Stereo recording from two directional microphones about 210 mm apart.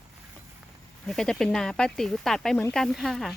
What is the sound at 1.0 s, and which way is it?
Speech, centre (ahead or behind).